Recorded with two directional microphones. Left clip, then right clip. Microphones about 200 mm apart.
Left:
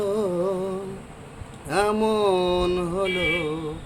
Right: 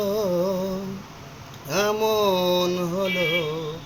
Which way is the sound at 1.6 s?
5° left (ahead or behind).